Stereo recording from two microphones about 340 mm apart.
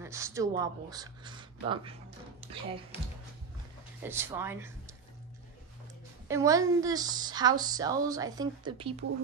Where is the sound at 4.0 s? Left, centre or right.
Centre.